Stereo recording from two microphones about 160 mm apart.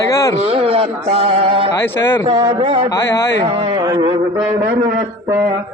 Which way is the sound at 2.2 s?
40° right (ahead or behind).